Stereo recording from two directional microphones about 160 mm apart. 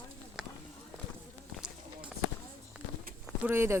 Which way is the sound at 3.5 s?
15° right (ahead or behind).